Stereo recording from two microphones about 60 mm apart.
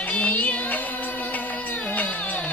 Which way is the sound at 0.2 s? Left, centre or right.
Left.